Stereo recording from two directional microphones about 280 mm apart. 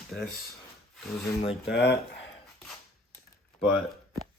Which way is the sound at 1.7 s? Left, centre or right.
Left.